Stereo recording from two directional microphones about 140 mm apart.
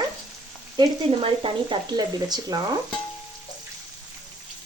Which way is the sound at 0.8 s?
40° right (ahead or behind).